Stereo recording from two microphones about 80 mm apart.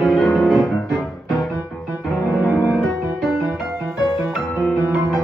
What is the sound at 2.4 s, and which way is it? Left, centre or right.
Music, left.